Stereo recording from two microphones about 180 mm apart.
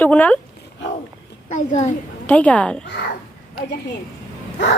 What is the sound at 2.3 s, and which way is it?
Speech, 10° left (ahead or behind).